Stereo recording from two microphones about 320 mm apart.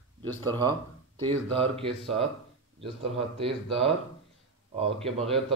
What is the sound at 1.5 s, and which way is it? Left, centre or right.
Speech, centre.